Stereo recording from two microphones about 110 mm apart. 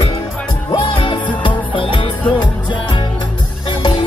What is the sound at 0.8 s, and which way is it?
Music, 50° left (ahead or behind).